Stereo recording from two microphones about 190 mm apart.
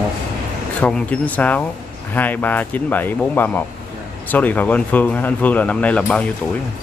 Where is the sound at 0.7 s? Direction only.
5° left (ahead or behind).